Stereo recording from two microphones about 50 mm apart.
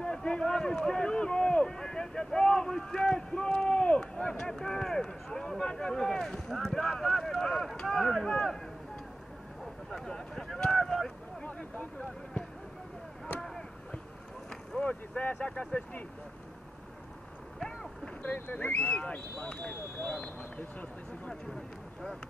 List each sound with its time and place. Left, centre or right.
0.0 s speech: centre
9.8 s speech: centre
11.4 s speech: left
14.8 s speech: left
17.6 s boat: centre
18.2 s speech: left